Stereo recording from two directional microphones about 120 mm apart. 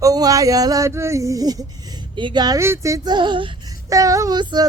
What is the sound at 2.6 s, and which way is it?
Speech, 25° right (ahead or behind).